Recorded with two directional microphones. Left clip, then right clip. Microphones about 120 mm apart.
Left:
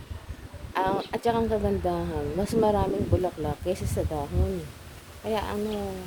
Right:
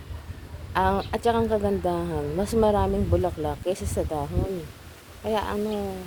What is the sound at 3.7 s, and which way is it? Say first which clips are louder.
Speech: right 1 dB; 40° left (ahead or behind).